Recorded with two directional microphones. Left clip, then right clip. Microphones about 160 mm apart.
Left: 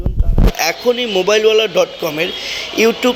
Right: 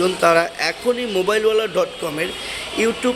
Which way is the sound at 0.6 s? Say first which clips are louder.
Left 5 dB; 10° left (ahead or behind).